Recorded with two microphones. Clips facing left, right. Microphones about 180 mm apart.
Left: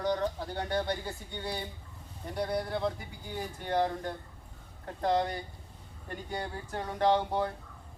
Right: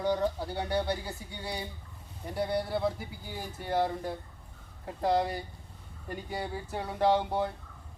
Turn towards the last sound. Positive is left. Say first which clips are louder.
# right 1 dB
turn(degrees=-5)  # may be behind; listen again after turning